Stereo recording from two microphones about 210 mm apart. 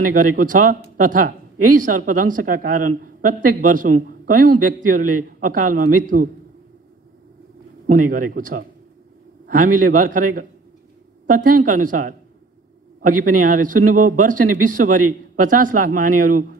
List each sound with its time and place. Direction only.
0.0 s a man's voice: 40° right (ahead or behind)
7.8 s a man's voice: 40° right (ahead or behind)